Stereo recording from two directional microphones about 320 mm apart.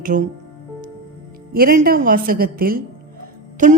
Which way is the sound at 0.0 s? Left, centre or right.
Right.